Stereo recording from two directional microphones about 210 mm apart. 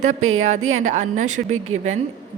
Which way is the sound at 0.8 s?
35° right (ahead or behind).